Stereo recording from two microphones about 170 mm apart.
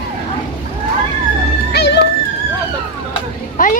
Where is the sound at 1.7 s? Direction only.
80° left.